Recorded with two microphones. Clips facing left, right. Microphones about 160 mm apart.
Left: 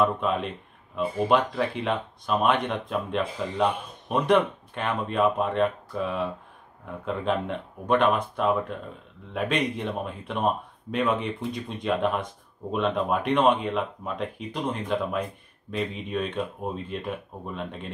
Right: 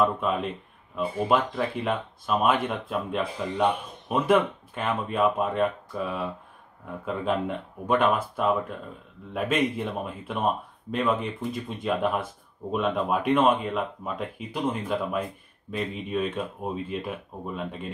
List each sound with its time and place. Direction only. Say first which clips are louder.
0.0 s speech: even; centre (ahead or behind)